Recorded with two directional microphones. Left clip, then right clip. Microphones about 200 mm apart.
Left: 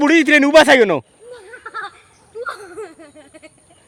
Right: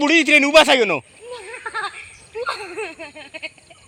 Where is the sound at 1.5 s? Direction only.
35° left (ahead or behind).